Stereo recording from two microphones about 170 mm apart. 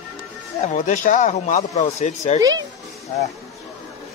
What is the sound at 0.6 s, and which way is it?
Speech, 45° left (ahead or behind).